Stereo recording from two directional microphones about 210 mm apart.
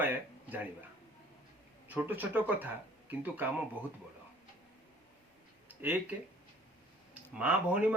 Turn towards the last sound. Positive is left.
turn(degrees=-5)  # may be behind; listen again after turning